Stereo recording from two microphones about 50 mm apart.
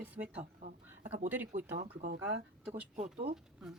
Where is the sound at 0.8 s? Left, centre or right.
Right.